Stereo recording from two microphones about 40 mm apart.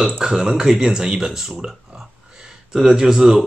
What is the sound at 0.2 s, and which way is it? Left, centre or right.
Speech, centre.